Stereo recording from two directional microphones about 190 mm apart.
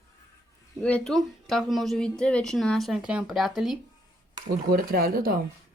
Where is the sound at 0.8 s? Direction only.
5° left (ahead or behind).